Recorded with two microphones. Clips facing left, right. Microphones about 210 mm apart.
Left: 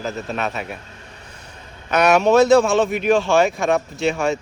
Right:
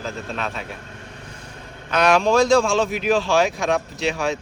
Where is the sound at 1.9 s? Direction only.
10° left (ahead or behind).